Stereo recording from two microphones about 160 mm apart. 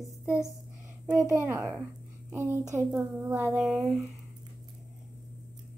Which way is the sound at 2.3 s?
15° right (ahead or behind).